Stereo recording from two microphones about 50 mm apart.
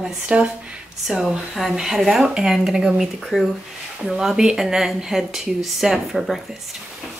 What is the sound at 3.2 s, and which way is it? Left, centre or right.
Speech, centre.